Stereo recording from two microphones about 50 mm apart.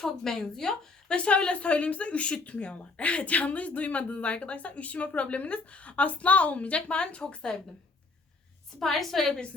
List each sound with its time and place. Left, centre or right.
0.0 s a woman's voice: centre
1.1 s speech: left
8.8 s a woman's voice: centre